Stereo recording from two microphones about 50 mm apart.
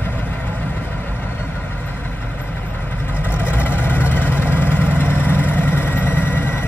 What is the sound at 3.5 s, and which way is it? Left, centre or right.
Vehicle, left.